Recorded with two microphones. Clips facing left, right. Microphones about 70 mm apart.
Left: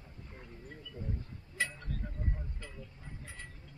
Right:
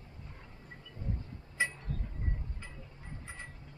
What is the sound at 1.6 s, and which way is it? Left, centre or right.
Speech, right.